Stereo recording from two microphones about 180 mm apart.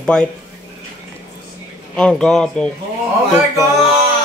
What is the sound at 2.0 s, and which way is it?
Speech, 5° left (ahead or behind).